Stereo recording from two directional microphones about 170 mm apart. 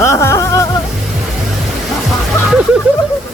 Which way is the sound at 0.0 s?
15° left (ahead or behind).